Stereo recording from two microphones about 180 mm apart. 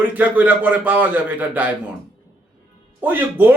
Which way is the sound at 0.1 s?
10° right (ahead or behind).